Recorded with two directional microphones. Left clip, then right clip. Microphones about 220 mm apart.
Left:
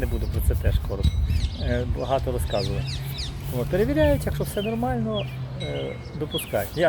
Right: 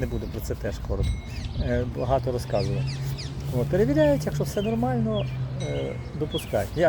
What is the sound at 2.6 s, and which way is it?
Speech, 25° left (ahead or behind).